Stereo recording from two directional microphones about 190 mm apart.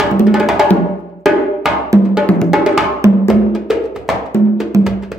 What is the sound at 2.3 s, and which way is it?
Music, centre (ahead or behind).